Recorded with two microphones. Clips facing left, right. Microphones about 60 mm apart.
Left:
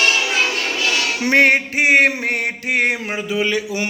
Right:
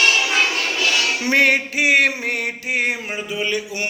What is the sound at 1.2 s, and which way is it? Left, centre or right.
Music, left.